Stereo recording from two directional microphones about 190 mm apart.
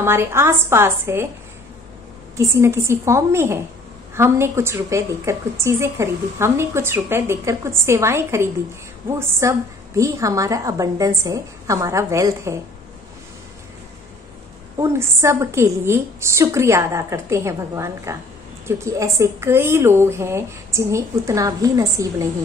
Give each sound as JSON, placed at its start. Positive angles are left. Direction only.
{"t": 0.0, "sound": "a woman's voice", "side_deg": -15}
{"t": 2.3, "sound": "a woman's voice", "side_deg": -15}
{"t": 14.8, "sound": "a woman's voice", "side_deg": -15}